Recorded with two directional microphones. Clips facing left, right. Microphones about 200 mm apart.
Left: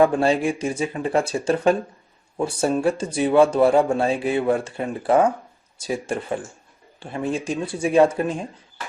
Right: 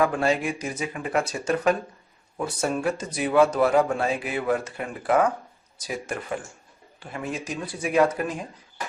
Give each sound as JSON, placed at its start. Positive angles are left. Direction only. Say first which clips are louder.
{"t": 0.0, "sound": "speech", "louder": "left 5 dB", "side_deg": 30}